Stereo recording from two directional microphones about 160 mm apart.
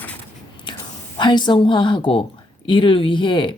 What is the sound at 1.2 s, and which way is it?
A woman's voice, 30° left (ahead or behind).